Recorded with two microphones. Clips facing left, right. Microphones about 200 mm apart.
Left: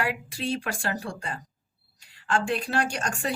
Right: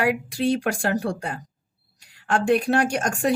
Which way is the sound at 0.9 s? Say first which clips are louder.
Right 8 dB; 65° right (ahead or behind).